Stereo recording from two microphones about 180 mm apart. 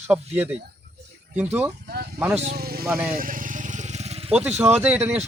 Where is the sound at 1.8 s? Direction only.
60° right (ahead or behind).